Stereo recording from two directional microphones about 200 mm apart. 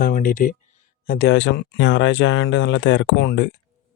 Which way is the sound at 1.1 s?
55° left (ahead or behind).